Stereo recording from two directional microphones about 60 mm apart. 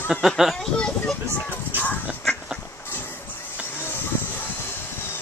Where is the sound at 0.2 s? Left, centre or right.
Centre.